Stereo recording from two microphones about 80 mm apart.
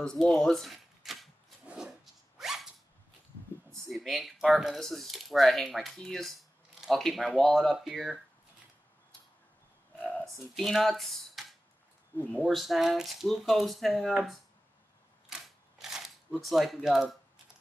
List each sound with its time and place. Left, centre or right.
0.0 s speech: centre
1.7 s zipper: centre
3.9 s speech: centre
9.9 s a sound: left
10.2 s speech: centre
12.4 s speech: centre
15.3 s camera: centre
15.8 s speech: centre